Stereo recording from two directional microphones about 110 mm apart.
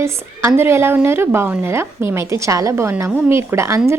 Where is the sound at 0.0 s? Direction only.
25° right (ahead or behind).